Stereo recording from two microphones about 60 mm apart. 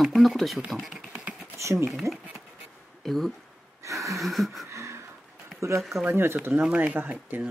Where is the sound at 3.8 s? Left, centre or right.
Right.